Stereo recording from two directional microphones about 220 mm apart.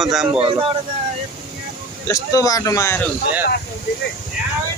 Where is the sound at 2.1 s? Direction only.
15° left (ahead or behind).